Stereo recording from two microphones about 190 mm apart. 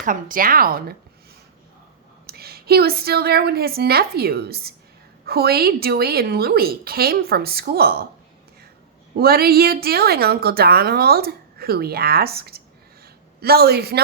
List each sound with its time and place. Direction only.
0.0 s a woman's voice: 45° right (ahead or behind)
2.2 s a woman's voice: 55° right (ahead or behind)
9.1 s a woman's voice: 55° right (ahead or behind)